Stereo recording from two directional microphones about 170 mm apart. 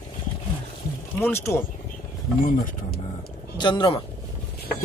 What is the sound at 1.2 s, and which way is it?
Speech, 15° left (ahead or behind).